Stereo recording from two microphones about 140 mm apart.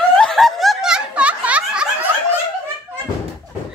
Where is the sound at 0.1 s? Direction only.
5° left (ahead or behind).